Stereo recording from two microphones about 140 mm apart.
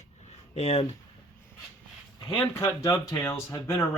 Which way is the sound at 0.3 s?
50° left (ahead or behind).